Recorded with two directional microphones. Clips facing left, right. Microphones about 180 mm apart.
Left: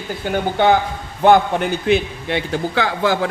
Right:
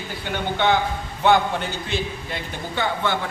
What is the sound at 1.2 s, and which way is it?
A man's voice, 55° left (ahead or behind).